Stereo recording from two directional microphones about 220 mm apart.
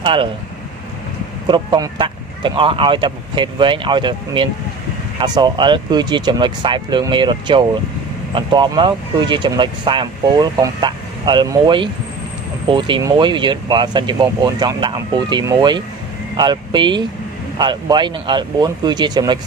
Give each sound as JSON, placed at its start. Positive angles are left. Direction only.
{"t": 0.0, "sound": "speech", "side_deg": -20}
{"t": 1.5, "sound": "speech", "side_deg": -20}